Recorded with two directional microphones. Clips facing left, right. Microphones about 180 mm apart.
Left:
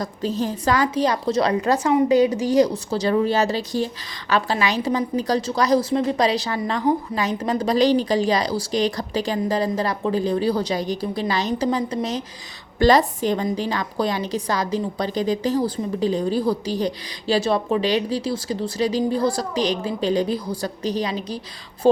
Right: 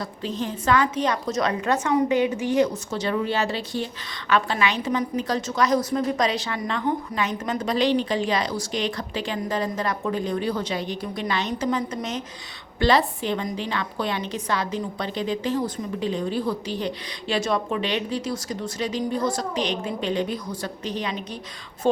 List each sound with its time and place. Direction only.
0.0 s a woman's voice: 40° left (ahead or behind)